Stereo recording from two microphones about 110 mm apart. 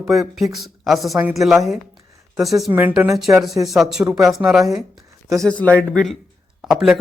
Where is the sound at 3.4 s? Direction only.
Centre (ahead or behind).